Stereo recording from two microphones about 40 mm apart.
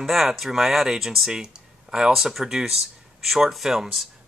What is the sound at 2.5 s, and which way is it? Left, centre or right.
Speech, centre.